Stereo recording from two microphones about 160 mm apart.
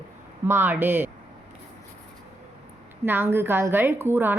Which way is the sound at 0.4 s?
15° right (ahead or behind).